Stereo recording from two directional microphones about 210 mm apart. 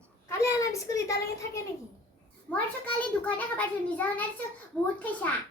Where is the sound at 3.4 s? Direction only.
5° left (ahead or behind).